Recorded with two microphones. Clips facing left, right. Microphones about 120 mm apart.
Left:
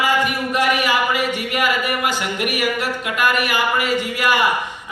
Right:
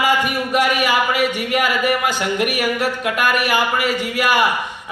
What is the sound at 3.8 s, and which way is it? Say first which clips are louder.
Speech: even; 15° left (ahead or behind).